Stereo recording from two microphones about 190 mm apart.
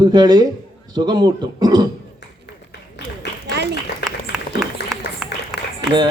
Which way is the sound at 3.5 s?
60° right (ahead or behind).